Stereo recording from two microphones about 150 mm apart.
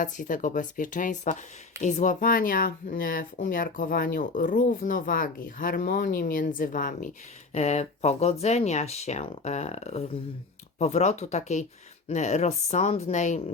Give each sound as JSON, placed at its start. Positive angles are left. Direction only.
{"t": 0.0, "sound": "speech", "side_deg": 60}
{"t": 7.5, "sound": "speech", "side_deg": 45}